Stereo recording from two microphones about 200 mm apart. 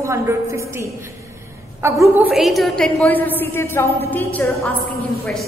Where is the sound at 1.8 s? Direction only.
15° right (ahead or behind).